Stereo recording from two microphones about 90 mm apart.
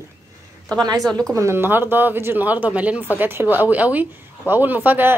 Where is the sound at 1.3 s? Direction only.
30° right (ahead or behind).